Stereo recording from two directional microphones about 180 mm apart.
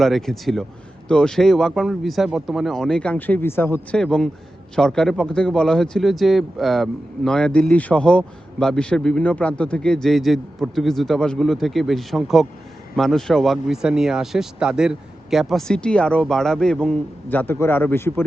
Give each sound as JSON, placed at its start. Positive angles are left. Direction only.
{"t": 0.0, "sound": "speech", "side_deg": 0}